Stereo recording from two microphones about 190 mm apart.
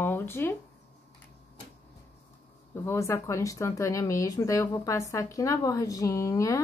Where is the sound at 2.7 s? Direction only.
15° left (ahead or behind).